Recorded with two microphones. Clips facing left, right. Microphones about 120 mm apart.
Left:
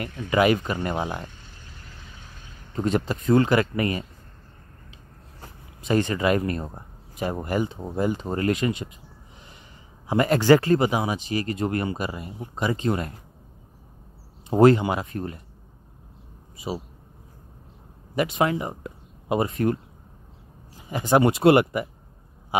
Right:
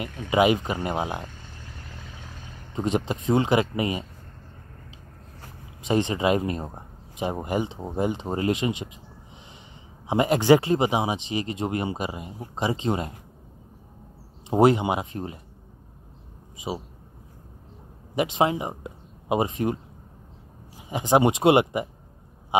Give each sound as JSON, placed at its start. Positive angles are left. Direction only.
{"t": 0.0, "sound": "speech", "side_deg": -15}
{"t": 2.7, "sound": "speech", "side_deg": -15}
{"t": 5.9, "sound": "speech", "side_deg": -20}
{"t": 10.0, "sound": "speech", "side_deg": -20}
{"t": 14.5, "sound": "speech", "side_deg": -15}
{"t": 16.5, "sound": "a man's voice", "side_deg": -15}
{"t": 18.4, "sound": "speech", "side_deg": -20}
{"t": 22.5, "sound": "a sound", "side_deg": -20}